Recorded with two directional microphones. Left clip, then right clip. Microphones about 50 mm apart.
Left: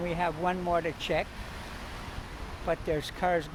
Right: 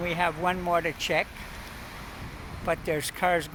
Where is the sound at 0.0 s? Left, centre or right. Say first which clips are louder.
Right 3 dB; right.